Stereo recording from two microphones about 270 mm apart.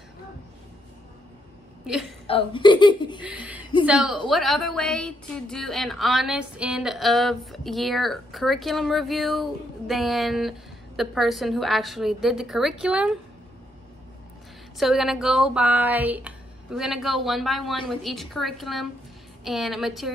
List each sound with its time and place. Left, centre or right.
2.2 s speech: centre
3.2 s a sound: centre
3.8 s a woman's voice: centre
14.8 s a woman's voice: centre